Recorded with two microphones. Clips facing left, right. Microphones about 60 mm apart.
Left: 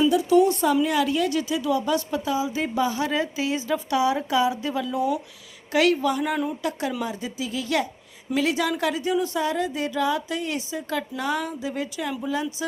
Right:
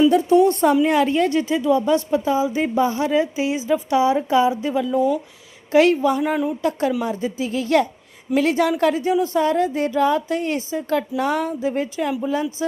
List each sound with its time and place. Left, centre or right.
0.1 s a woman's voice: right